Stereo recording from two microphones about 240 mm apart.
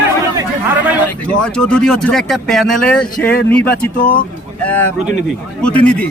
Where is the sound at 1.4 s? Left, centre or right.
Centre.